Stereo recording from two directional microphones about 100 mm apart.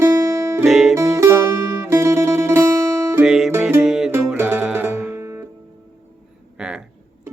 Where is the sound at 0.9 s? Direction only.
30° right (ahead or behind).